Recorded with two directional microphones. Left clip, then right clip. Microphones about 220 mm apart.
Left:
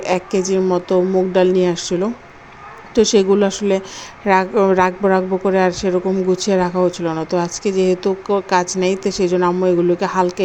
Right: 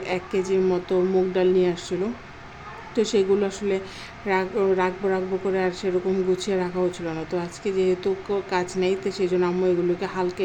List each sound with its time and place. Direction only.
0.0 s a woman's voice: 25° left (ahead or behind)